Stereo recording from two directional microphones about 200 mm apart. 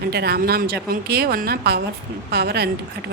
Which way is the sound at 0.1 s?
55° right (ahead or behind).